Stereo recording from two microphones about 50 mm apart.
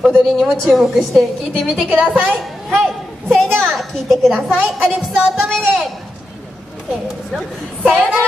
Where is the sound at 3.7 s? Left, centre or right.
Centre.